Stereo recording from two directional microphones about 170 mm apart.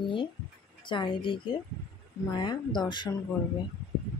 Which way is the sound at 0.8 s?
30° left (ahead or behind).